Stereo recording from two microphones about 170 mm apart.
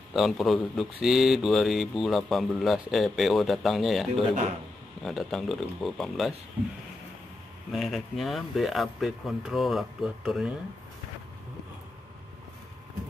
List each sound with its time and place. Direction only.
0.1 s speech: centre (ahead or behind)
7.7 s speech: centre (ahead or behind)